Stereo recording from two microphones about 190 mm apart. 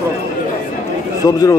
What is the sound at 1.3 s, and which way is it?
Speech, 20° left (ahead or behind).